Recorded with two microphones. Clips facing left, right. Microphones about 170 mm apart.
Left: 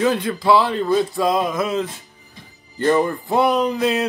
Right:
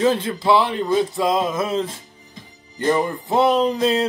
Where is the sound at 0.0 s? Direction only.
25° right (ahead or behind).